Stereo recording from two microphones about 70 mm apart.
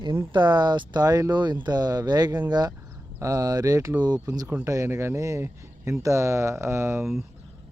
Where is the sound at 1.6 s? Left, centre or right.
Right.